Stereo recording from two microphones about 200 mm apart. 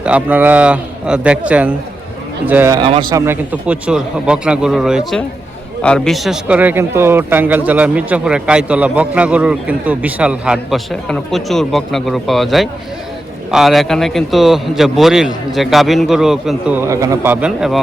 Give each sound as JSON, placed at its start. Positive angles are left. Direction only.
{"t": 0.0, "sound": "a man's voice", "side_deg": -5}
{"t": 3.2, "sound": "a man's voice", "side_deg": -5}